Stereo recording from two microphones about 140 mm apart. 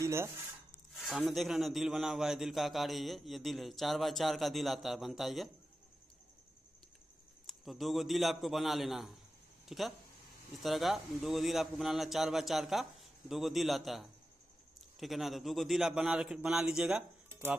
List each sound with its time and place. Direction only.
0.0 s a sound: 20° right (ahead or behind)
0.9 s a man's voice: centre (ahead or behind)
7.4 s a man's voice: centre (ahead or behind)